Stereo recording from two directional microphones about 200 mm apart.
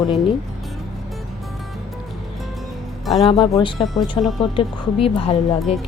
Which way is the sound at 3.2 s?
20° left (ahead or behind).